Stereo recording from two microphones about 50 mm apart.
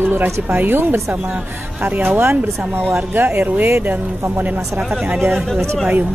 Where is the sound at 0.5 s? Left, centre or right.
Right.